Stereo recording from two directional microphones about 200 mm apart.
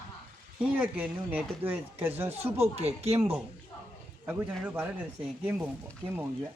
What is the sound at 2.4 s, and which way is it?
Speech, 30° right (ahead or behind).